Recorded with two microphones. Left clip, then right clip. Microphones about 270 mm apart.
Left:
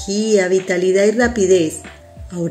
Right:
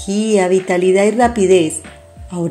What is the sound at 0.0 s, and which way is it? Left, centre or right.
A woman's voice, centre.